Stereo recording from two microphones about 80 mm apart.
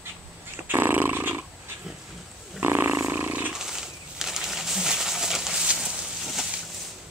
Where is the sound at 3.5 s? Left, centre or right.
Centre.